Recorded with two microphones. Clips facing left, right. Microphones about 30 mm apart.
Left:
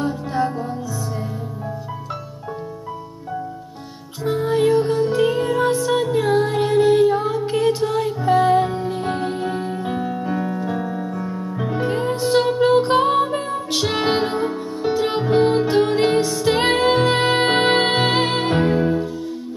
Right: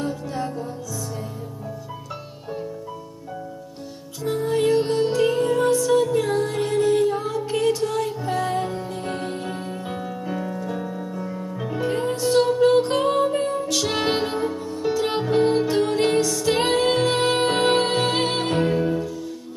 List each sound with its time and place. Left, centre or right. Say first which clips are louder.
0.0 s music: left 6 dB; left
4.2 s music: left 3 dB; left
9.2 s music: left 6 dB; left
9.8 s music: left 5 dB; centre